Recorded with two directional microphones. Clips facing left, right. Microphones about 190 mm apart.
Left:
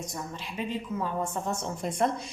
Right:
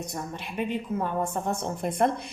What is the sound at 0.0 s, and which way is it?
A woman's voice, 60° right (ahead or behind).